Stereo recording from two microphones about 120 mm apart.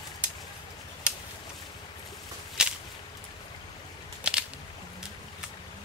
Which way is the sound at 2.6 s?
5° right (ahead or behind).